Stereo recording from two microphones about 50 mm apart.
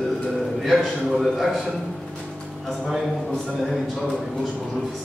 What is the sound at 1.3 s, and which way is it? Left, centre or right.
Speech, centre.